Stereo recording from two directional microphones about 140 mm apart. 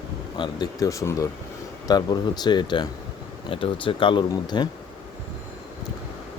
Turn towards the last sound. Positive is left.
turn(degrees=30)  # may be behind; listen again after turning